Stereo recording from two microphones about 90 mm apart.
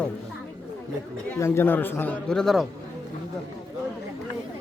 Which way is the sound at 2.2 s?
5° left (ahead or behind).